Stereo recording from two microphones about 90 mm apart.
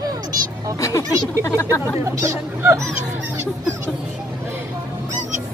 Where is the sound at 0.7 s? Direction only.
35° left (ahead or behind).